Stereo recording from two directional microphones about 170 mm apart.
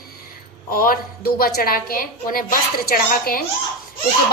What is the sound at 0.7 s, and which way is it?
A woman's voice, 60° left (ahead or behind).